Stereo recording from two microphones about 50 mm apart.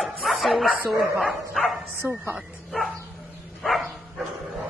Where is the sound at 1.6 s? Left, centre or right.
Centre.